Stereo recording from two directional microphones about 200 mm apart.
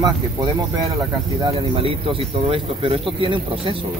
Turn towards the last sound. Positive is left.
turn(degrees=-25)  # may be behind; listen again after turning